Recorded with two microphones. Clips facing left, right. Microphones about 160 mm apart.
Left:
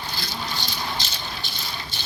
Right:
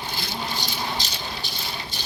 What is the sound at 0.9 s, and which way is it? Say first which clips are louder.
Rattle: right 1 dB; 40° right (ahead or behind).